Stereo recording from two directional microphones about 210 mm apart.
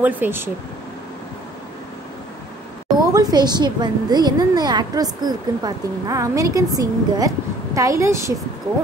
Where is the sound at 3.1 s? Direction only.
20° right (ahead or behind).